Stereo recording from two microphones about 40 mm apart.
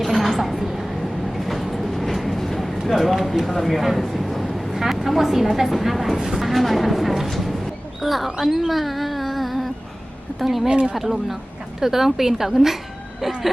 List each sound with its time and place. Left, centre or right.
0.0 s a sound: centre
1.4 s train: centre
2.9 s speech: centre
4.0 s vehicle: centre
5.0 s speech: centre
8.0 s a sound: centre
10.4 s speech: centre
10.7 s speech: right
10.9 s a woman's voice: centre